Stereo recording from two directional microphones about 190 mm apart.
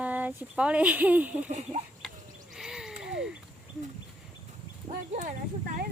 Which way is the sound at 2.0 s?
Centre (ahead or behind).